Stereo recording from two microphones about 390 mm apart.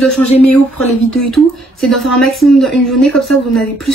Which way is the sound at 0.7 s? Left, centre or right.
Left.